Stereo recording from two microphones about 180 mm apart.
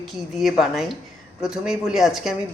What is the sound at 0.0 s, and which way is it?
Speech, centre (ahead or behind).